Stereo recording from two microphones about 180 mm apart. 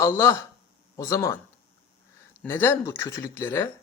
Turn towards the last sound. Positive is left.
turn(degrees=15)  # may be behind; listen again after turning